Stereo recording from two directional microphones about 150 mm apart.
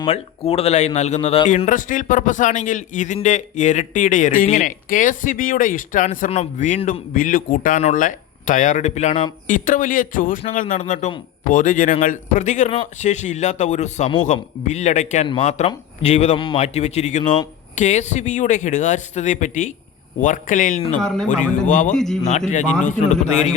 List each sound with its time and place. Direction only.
0.1 s a man's voice: 40° left (ahead or behind)
1.5 s speech: 55° left (ahead or behind)
9.5 s a man's voice: 60° left (ahead or behind)
21.9 s a man's voice: 5° left (ahead or behind)
22.2 s a man's voice: 55° left (ahead or behind)